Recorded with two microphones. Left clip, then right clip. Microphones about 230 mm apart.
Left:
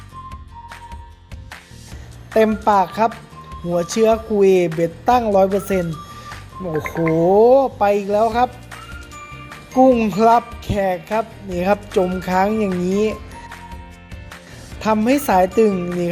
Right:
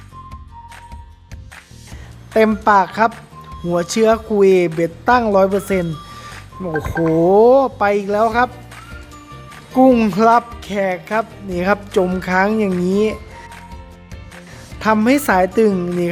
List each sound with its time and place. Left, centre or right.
2.3 s speech: centre
9.7 s speech: centre
14.8 s speech: centre